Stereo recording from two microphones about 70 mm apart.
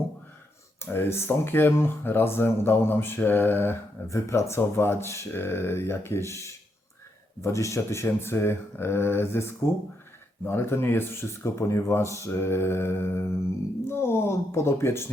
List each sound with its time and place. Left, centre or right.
0.9 s speech: left
4.0 s speech: left